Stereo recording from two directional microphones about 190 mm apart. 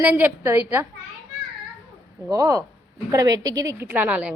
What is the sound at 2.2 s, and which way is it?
A woman's voice, 15° right (ahead or behind).